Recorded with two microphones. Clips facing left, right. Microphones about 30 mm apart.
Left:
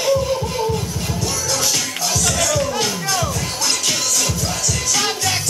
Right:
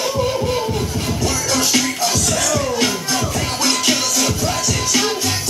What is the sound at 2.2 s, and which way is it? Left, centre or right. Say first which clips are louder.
Music: even; centre.